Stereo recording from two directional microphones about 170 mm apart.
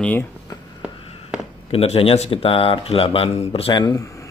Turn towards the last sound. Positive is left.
turn(degrees=20)  # may be behind; listen again after turning